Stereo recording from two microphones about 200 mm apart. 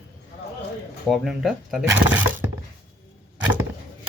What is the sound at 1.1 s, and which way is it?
Speech, centre (ahead or behind).